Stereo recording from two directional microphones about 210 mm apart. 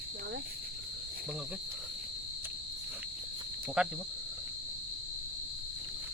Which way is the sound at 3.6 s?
5° right (ahead or behind).